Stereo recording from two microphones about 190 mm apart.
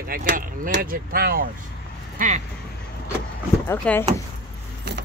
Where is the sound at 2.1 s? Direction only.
40° right (ahead or behind).